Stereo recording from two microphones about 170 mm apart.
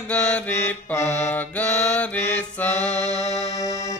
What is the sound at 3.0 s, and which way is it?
Music, 40° left (ahead or behind).